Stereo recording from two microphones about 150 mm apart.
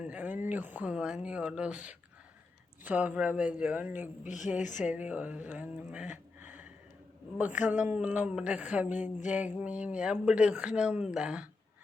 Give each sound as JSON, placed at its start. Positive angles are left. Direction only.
{"t": 0.0, "sound": "speech", "side_deg": -10}
{"t": 4.2, "sound": "speech", "side_deg": 55}
{"t": 4.8, "sound": "a sound", "side_deg": -10}
{"t": 7.3, "sound": "speech", "side_deg": -10}